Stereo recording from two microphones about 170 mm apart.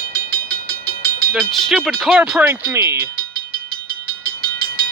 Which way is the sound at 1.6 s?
Centre (ahead or behind).